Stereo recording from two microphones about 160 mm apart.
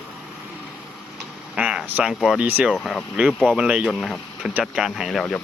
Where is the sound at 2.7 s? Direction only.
Centre (ahead or behind).